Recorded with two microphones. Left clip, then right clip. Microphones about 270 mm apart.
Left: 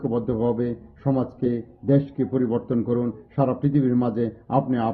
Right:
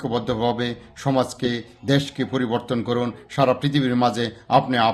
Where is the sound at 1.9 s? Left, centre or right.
Centre.